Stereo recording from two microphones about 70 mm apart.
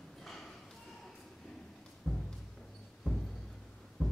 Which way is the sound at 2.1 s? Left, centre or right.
Centre.